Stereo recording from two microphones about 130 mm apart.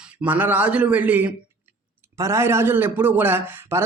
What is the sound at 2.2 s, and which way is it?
Speech, 20° right (ahead or behind).